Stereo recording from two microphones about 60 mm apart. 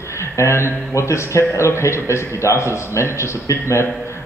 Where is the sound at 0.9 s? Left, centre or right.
Left.